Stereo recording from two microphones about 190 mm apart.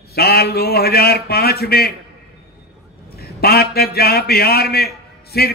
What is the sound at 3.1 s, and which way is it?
A man's voice, 55° left (ahead or behind).